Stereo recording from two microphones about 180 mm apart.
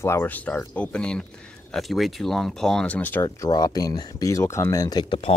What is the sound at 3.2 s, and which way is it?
Speech, 20° left (ahead or behind).